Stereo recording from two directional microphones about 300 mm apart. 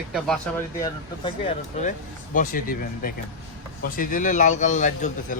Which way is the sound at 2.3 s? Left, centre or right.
Left.